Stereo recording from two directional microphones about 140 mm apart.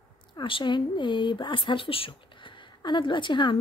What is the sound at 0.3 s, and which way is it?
Speech, 35° left (ahead or behind).